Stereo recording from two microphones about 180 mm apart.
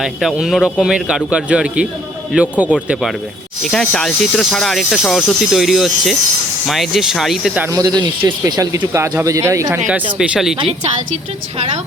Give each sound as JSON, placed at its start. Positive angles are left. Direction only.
{"t": 0.0, "sound": "speech", "side_deg": 0}
{"t": 7.7, "sound": "speech", "side_deg": -20}
{"t": 9.7, "sound": "speech", "side_deg": -5}